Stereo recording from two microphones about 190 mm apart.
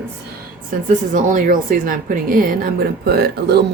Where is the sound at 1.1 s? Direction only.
45° right (ahead or behind).